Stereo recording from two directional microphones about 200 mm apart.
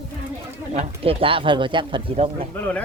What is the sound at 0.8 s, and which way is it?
Speech, 25° right (ahead or behind).